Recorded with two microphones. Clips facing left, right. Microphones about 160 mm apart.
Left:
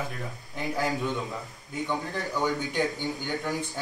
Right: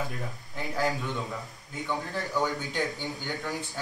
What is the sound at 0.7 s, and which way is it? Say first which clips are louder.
A man's voice: even; 20° left (ahead or behind).